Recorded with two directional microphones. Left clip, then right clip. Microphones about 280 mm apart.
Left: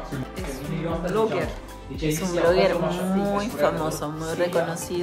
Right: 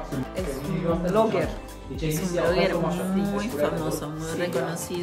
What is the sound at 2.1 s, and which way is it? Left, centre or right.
A woman's voice, centre.